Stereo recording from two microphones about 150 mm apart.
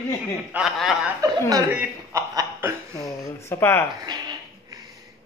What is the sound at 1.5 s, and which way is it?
Speech, 15° right (ahead or behind).